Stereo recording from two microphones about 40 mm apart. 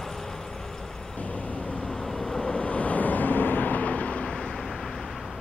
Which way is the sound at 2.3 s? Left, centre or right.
Centre.